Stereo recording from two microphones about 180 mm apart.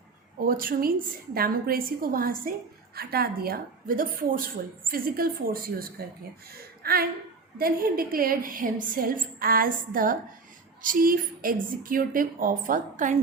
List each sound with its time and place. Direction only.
0.3 s a woman's voice: 50° right (ahead or behind)